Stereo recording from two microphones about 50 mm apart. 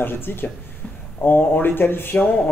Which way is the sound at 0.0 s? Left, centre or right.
Left.